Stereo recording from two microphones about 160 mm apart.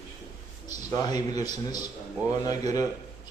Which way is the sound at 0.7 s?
25° left (ahead or behind).